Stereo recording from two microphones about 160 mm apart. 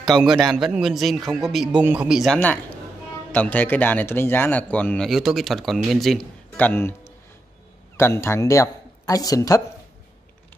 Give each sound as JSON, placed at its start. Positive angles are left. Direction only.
{"t": 0.0, "sound": "a man's voice", "side_deg": 0}
{"t": 8.0, "sound": "speech", "side_deg": 15}